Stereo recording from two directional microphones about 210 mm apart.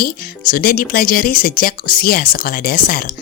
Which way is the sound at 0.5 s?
45° left (ahead or behind).